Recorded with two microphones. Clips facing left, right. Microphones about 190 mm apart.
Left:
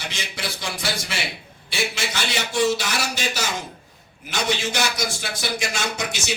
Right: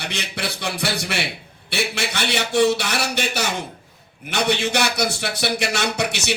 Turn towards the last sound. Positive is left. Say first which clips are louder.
# right 4 dB
turn(degrees=-65)  # may be behind; listen again after turning